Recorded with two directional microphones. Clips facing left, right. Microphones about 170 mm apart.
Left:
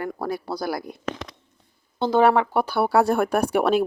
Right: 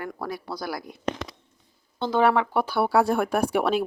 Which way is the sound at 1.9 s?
40° left (ahead or behind).